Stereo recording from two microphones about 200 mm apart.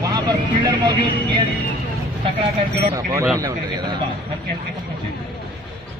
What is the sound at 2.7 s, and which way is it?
Speech, 15° right (ahead or behind).